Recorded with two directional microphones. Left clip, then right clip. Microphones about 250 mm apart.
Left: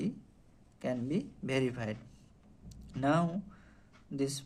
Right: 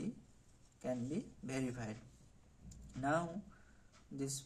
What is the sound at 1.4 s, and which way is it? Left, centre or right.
Speech, left.